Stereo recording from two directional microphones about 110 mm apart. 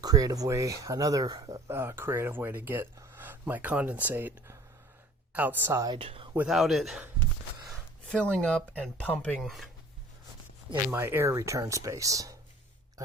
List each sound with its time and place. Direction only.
0.0 s speech: 35° right (ahead or behind); by 5.8 s 20° right (ahead or behind)
6.0 s speech: 60° right (ahead or behind)
6.5 s a man's voice: centre (ahead or behind)
8.1 s speech: 10° left (ahead or behind)
10.9 s speech: 20° right (ahead or behind)